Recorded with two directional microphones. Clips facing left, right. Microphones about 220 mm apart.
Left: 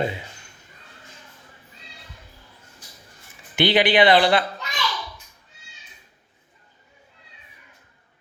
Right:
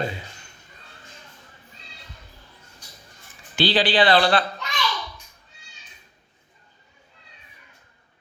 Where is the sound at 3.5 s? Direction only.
20° left (ahead or behind).